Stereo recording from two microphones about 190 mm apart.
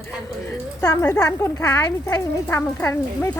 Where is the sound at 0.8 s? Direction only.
15° left (ahead or behind).